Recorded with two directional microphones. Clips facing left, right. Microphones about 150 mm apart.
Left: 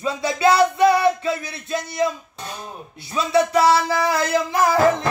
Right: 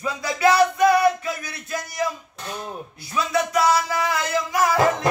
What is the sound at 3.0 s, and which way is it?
Speech, 25° left (ahead or behind).